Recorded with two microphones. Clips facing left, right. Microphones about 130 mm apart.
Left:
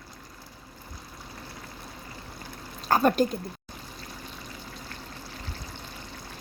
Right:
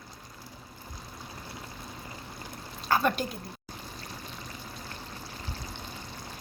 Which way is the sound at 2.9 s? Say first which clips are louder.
Left 5 dB; 40° left (ahead or behind).